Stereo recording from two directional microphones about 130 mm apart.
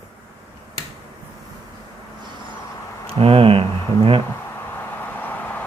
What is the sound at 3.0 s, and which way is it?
Speech, 45° right (ahead or behind).